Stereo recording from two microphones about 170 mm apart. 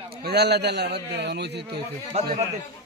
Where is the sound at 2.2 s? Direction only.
40° right (ahead or behind).